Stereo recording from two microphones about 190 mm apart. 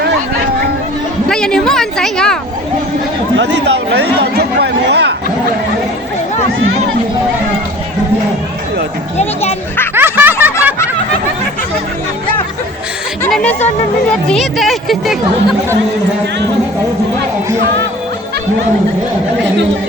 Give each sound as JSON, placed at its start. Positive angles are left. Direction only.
{"t": 1.3, "sound": "a woman's voice", "side_deg": 5}
{"t": 3.3, "sound": "speech", "side_deg": -65}
{"t": 9.1, "sound": "speech", "side_deg": 35}
{"t": 9.9, "sound": "snicker", "side_deg": -10}
{"t": 13.2, "sound": "a woman's voice", "side_deg": 10}